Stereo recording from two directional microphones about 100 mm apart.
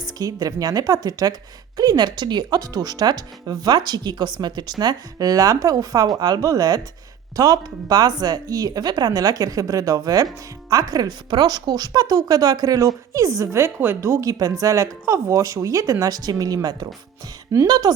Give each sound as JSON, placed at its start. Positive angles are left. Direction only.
{"t": 0.0, "sound": "a woman's voice", "side_deg": -40}